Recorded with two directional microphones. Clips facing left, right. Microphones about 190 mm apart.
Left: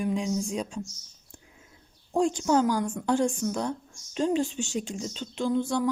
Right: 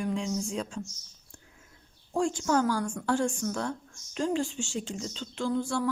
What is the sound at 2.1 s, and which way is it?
Speech, 20° left (ahead or behind).